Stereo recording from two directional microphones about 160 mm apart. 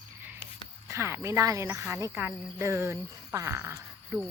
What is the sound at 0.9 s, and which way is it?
Speech, 15° right (ahead or behind).